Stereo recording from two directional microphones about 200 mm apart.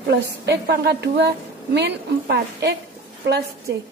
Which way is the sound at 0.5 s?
55° right (ahead or behind).